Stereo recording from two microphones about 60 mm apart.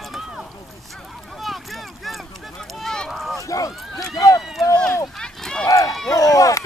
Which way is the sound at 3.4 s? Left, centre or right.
Left.